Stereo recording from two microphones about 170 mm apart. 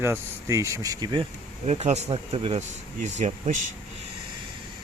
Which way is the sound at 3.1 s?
45° right (ahead or behind).